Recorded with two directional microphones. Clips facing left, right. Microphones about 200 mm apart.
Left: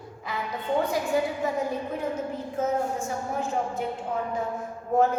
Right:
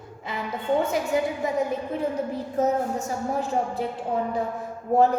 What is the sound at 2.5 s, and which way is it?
A woman's voice, 40° right (ahead or behind).